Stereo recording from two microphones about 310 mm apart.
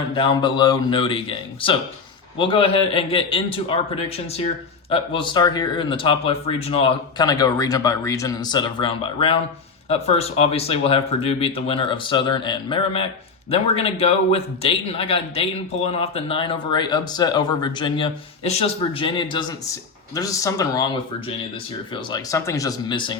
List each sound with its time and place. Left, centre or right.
0.2 s speech: centre
21.9 s speech: centre